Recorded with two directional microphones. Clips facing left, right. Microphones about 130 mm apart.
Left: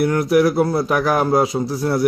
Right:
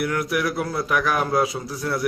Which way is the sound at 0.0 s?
30° left (ahead or behind).